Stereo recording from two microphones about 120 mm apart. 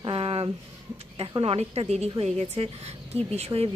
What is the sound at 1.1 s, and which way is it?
A woman's voice, 50° right (ahead or behind).